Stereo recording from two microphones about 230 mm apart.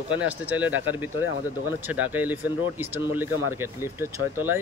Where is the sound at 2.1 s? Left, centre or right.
Centre.